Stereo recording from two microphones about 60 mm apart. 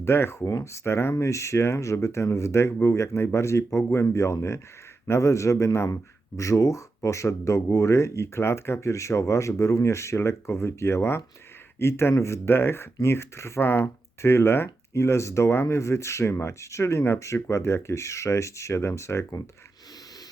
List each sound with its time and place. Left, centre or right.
0.0 s speech: left
1.1 s speech: left